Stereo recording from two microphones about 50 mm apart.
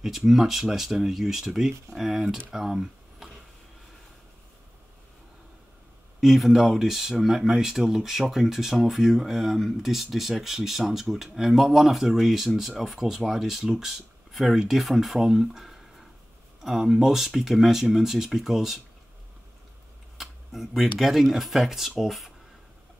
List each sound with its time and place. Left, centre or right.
0.0 s speech: centre
6.2 s speech: centre
20.2 s speech: centre